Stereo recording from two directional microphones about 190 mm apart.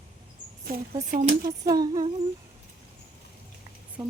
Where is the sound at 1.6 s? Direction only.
20° right (ahead or behind).